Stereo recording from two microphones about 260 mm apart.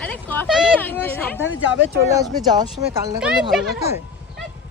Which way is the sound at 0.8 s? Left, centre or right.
Centre.